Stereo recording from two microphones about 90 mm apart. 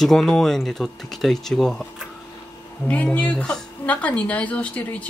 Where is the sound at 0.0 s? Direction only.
5° left (ahead or behind).